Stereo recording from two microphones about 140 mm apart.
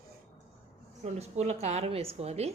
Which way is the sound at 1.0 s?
50° right (ahead or behind).